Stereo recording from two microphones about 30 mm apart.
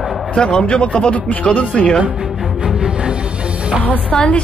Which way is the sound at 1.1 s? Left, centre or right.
Left.